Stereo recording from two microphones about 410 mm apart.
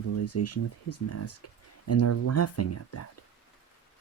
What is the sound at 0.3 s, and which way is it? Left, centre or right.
Speech, left.